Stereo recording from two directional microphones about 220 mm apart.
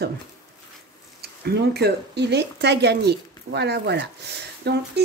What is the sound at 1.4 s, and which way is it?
Speech, 45° right (ahead or behind).